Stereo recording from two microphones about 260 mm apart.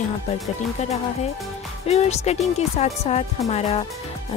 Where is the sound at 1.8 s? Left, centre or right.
Left.